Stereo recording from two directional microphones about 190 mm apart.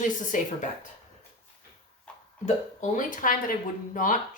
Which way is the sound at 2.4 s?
40° left (ahead or behind).